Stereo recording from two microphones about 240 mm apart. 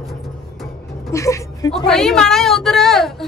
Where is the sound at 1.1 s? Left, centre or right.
Centre.